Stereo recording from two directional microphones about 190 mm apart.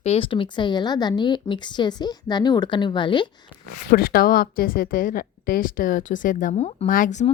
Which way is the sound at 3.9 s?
50° left (ahead or behind).